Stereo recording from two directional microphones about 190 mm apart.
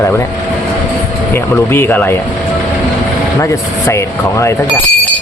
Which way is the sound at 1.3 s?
10° left (ahead or behind).